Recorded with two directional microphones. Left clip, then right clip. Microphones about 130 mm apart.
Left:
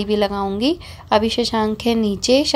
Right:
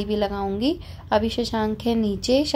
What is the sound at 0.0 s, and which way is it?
A woman's voice, 15° left (ahead or behind).